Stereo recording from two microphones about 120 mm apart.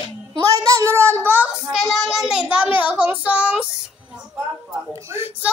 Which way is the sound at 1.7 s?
Centre (ahead or behind).